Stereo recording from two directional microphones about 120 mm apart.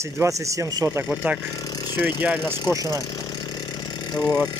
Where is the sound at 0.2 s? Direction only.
25° right (ahead or behind).